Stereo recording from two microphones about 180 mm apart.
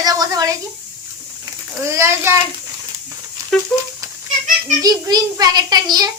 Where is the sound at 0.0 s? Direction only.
20° right (ahead or behind).